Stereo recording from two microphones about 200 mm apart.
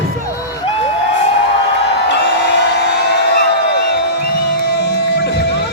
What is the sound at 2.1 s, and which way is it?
Music, 60° left (ahead or behind).